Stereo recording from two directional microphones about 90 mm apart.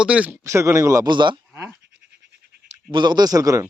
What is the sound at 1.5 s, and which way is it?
Bleat, 25° right (ahead or behind).